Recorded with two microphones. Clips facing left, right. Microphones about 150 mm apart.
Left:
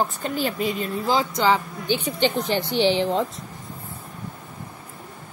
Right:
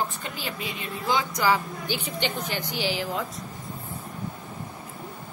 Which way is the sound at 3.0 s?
25° left (ahead or behind).